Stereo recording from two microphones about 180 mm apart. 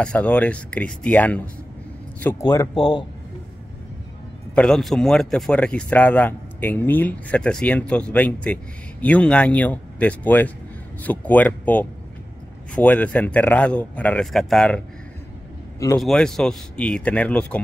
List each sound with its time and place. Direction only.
0.0 s speech: 5° left (ahead or behind)
4.6 s speech: 5° left (ahead or behind)
16.0 s speech: centre (ahead or behind)